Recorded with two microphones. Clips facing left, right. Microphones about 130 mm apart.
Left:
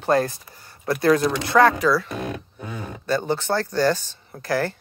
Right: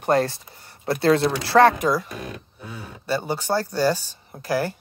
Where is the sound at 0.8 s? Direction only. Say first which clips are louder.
Even; 25° right (ahead or behind).